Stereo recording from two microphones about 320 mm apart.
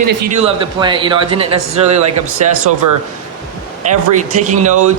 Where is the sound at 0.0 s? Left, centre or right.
Right.